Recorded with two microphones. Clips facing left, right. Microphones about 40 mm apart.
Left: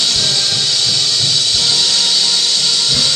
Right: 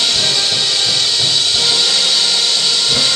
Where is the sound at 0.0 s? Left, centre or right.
Right.